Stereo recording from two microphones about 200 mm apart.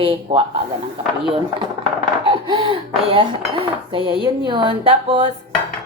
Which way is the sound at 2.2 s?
25° right (ahead or behind).